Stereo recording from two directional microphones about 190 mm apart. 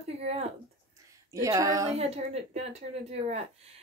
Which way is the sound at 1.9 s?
35° right (ahead or behind).